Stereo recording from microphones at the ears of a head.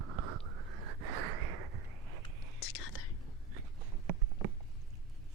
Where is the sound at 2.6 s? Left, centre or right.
Left.